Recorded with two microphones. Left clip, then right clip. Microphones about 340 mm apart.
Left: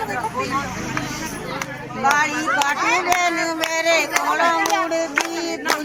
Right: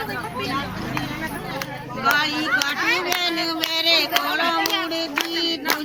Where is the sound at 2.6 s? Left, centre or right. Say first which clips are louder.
Left 3 dB; centre.